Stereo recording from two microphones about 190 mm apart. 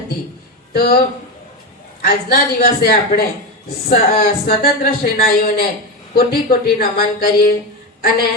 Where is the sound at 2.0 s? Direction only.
55° left (ahead or behind).